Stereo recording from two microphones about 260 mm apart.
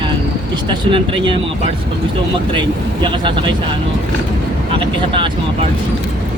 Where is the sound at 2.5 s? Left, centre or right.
Centre.